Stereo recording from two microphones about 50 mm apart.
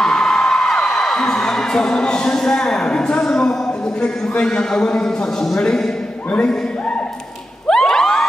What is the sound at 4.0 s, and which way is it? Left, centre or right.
A man's voice, centre.